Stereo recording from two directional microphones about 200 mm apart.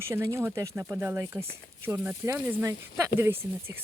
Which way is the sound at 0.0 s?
15° right (ahead or behind).